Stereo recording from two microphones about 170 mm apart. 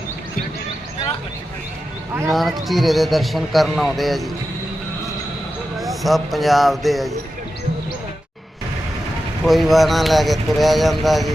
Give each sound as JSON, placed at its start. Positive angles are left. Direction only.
{"t": 2.3, "sound": "speech", "side_deg": 0}
{"t": 5.8, "sound": "speech", "side_deg": 0}
{"t": 9.4, "sound": "speech", "side_deg": 0}